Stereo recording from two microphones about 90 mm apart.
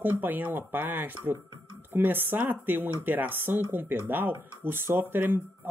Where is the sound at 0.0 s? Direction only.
20° right (ahead or behind).